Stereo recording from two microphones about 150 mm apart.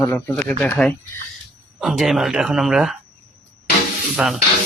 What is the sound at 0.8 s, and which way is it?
Speech, 5° left (ahead or behind).